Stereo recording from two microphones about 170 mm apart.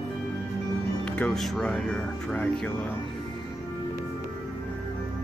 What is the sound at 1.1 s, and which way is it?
Speech, 5° left (ahead or behind).